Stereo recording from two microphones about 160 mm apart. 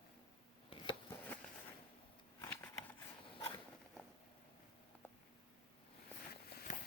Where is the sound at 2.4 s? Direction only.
15° left (ahead or behind).